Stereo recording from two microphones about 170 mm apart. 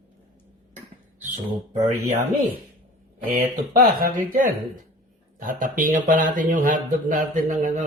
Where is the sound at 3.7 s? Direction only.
55° right (ahead or behind).